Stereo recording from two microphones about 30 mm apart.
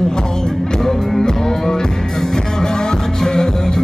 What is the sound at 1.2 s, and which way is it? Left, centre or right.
Music, left.